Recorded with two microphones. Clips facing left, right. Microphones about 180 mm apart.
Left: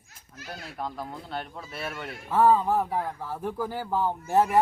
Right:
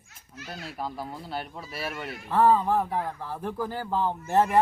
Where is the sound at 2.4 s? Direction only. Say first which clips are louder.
Even; 10° left (ahead or behind).